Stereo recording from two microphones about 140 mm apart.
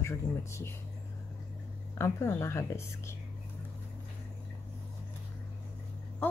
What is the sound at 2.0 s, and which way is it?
Speech, 20° left (ahead or behind).